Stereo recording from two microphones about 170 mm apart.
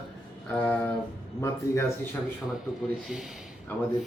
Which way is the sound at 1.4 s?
15° left (ahead or behind).